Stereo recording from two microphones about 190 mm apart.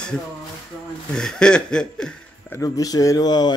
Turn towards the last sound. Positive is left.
turn(degrees=20)  # may be behind; listen again after turning